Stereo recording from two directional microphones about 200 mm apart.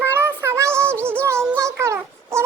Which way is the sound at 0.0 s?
10° right (ahead or behind).